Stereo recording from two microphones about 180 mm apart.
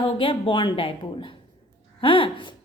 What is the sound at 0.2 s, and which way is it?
A woman's voice, 30° left (ahead or behind).